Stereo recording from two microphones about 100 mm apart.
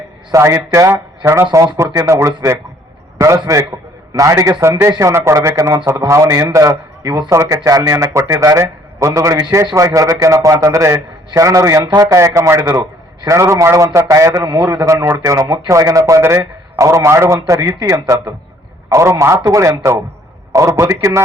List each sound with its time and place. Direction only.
0.3 s a man's voice: 30° right (ahead or behind)
7.0 s speech: 45° right (ahead or behind)
7.3 s a man's voice: 30° right (ahead or behind)
14.4 s a man's voice: 45° right (ahead or behind)
15.2 s a man's voice: 35° right (ahead or behind)